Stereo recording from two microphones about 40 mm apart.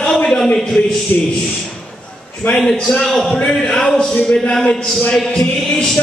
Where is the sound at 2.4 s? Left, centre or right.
Left.